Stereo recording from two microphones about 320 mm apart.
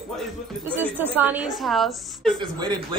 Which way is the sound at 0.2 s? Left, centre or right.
Centre.